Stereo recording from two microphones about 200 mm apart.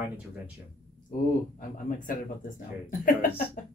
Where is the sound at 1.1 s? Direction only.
40° left (ahead or behind).